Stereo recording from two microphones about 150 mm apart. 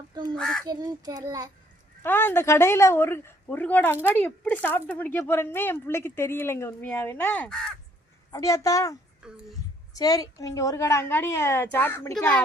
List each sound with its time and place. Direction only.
0.1 s crow: 25° right (ahead or behind)
0.3 s speech: 5° left (ahead or behind)
0.6 s a child's voice: 25° right (ahead or behind)
2.0 s speech: 15° left (ahead or behind)
8.3 s a woman's voice: 20° left (ahead or behind)
9.2 s speech: 5° right (ahead or behind)
9.9 s a woman's voice: 25° left (ahead or behind)